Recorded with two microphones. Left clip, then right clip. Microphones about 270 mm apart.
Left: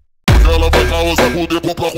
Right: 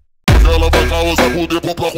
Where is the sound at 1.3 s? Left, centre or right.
Left.